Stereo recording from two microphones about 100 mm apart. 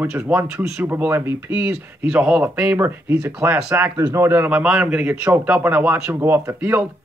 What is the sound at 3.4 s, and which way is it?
A man's voice, 25° right (ahead or behind).